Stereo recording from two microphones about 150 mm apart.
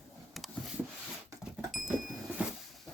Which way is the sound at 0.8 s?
15° right (ahead or behind).